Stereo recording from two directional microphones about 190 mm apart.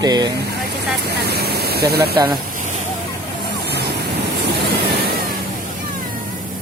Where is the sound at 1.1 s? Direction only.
55° right (ahead or behind).